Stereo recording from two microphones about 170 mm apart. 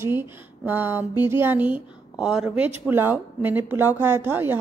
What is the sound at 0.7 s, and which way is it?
A woman's voice, 10° right (ahead or behind).